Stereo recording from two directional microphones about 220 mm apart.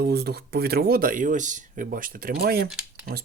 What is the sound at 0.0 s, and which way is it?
Speech, 45° right (ahead or behind).